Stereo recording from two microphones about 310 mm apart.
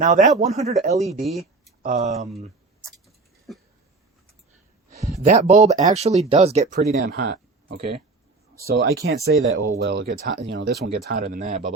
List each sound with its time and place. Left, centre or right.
0.0 s speech: right
1.2 s speech: centre
1.8 s speech: right
3.5 s a sound: centre
5.2 s speech: right